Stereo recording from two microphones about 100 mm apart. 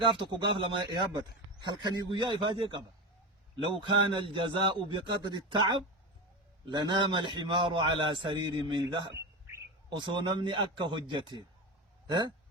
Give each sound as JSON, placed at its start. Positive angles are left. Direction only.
{"t": 0.0, "sound": "a man's voice", "side_deg": -55}